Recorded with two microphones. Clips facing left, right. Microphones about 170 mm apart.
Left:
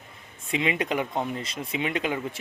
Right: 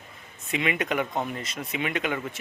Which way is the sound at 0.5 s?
30° left (ahead or behind).